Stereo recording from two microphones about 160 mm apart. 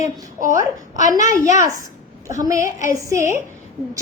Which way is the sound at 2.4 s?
20° right (ahead or behind).